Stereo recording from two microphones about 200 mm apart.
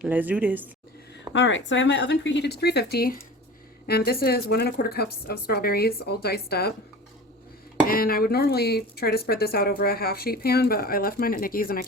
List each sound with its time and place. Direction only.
0.0 s speech: 10° right (ahead or behind)
1.3 s speech: 70° left (ahead or behind); by 6.7 s 50° left (ahead or behind)
7.9 s speech: 45° left (ahead or behind)